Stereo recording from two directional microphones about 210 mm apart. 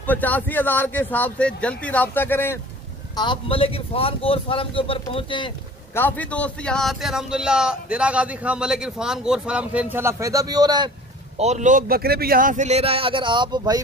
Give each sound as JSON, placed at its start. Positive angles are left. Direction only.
{"t": 0.0, "sound": "speech", "side_deg": 10}
{"t": 3.2, "sound": "speech", "side_deg": 25}
{"t": 5.9, "sound": "a man's voice", "side_deg": 10}
{"t": 11.3, "sound": "a man's voice", "side_deg": -35}